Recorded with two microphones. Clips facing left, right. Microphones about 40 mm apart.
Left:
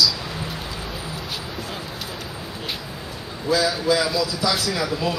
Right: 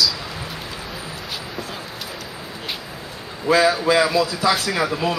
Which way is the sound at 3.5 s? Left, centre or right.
Right.